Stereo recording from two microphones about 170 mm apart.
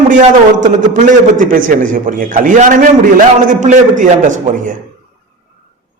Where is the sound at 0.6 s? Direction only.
50° right (ahead or behind).